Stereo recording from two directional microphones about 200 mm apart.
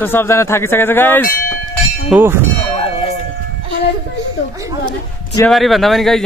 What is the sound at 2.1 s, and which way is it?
Speech, 10° right (ahead or behind).